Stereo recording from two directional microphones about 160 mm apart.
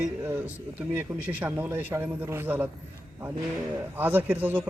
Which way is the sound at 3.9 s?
10° right (ahead or behind).